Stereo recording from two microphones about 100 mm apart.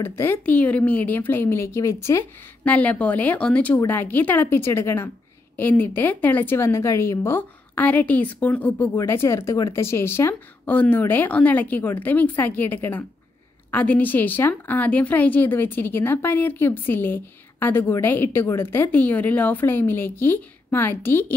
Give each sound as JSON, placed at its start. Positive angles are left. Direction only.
{"t": 0.0, "sound": "speech", "side_deg": 25}
{"t": 2.6, "sound": "a woman's voice", "side_deg": 15}